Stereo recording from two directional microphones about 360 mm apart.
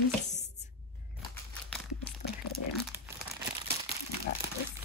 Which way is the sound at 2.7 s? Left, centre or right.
Centre.